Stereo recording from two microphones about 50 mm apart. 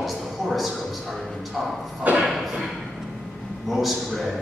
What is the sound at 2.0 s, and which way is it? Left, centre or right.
Speech, right.